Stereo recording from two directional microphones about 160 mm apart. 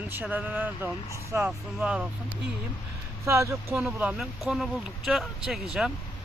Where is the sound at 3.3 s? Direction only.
20° right (ahead or behind).